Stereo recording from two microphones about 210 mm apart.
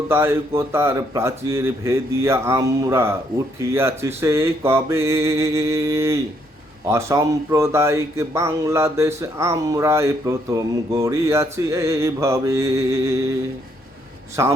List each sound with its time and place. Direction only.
0.1 s speech: 10° right (ahead or behind)
14.4 s speech: 15° right (ahead or behind)